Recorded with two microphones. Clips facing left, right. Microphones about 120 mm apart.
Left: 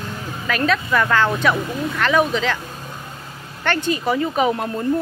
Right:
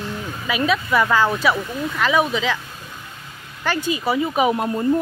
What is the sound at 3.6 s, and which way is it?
Speech, 5° right (ahead or behind).